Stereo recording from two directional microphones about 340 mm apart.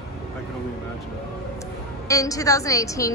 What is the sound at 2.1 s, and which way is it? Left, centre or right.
A woman's voice, centre.